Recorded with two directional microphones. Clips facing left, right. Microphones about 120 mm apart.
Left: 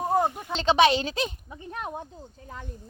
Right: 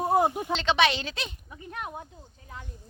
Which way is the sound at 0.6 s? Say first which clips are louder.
Left 6 dB; 40° left (ahead or behind).